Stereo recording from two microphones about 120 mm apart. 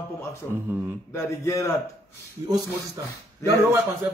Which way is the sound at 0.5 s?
15° right (ahead or behind).